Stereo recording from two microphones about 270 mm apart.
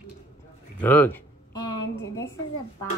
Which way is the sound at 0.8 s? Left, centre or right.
Centre.